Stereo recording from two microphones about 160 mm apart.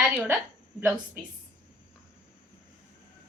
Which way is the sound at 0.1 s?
10° right (ahead or behind).